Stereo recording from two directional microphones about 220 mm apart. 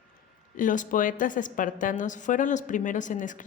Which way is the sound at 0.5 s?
35° left (ahead or behind).